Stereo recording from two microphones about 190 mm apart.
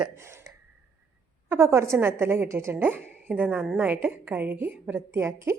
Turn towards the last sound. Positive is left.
turn(degrees=-15)  # may be behind; listen again after turning